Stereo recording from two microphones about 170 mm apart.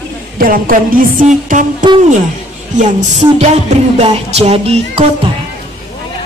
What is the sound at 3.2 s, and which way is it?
Music, 40° right (ahead or behind).